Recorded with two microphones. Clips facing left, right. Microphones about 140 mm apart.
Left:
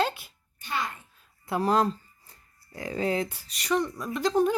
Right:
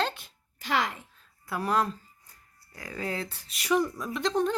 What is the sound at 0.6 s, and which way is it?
Speech, 90° right.